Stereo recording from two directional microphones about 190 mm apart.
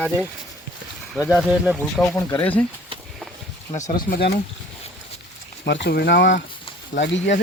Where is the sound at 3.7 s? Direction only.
40° left (ahead or behind).